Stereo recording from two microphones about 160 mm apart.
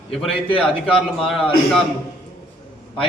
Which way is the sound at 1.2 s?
Centre (ahead or behind).